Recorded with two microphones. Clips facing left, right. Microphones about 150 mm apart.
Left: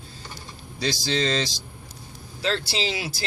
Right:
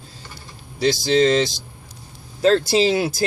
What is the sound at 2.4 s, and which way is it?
Speech, 45° right (ahead or behind).